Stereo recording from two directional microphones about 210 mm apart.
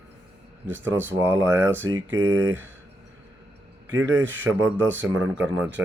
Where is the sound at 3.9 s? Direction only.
15° right (ahead or behind).